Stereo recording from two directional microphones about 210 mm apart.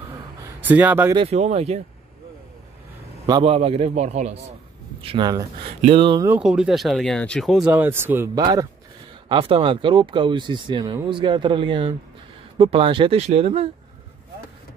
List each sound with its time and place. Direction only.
0.4 s a sound: 10° right (ahead or behind)
1.1 s a man's voice: 30° right (ahead or behind)
3.3 s a man's voice: 25° right (ahead or behind)
5.0 s speech: 20° right (ahead or behind)
6.2 s speech: 5° right (ahead or behind)
9.3 s speech: 25° right (ahead or behind)